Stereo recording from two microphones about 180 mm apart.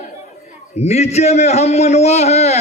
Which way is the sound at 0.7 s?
40° left (ahead or behind).